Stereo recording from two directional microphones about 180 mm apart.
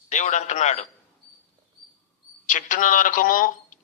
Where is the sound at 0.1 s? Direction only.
40° left (ahead or behind).